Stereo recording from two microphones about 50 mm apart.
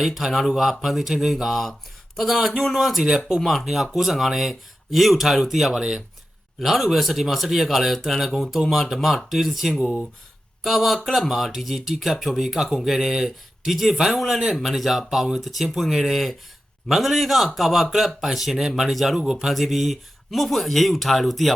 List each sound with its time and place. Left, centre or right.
0.0 s speech: centre
5.7 s speech: centre
6.6 s speech: centre